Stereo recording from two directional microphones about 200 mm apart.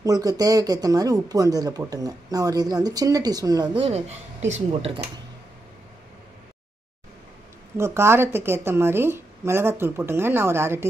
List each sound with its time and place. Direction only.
0.0 s speech: 20° right (ahead or behind)
7.7 s a woman's voice: 15° right (ahead or behind)